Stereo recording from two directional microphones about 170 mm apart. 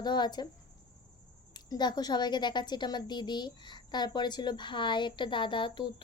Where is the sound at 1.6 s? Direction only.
25° left (ahead or behind).